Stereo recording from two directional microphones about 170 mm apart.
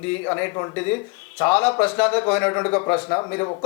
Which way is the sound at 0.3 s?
15° left (ahead or behind).